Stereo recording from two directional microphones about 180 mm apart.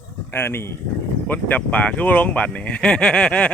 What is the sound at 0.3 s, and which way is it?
Speech, 15° left (ahead or behind).